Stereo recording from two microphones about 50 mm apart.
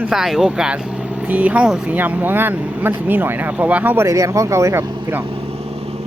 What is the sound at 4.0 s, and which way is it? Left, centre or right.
Speech, right.